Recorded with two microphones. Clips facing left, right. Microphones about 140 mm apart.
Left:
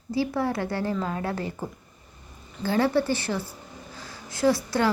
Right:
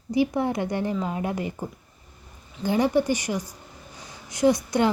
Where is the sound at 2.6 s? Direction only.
15° right (ahead or behind).